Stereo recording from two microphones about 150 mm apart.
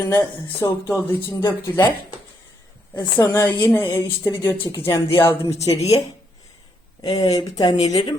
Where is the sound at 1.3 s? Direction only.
15° left (ahead or behind).